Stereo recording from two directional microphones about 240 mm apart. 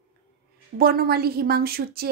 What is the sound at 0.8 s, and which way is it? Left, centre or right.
Speech, right.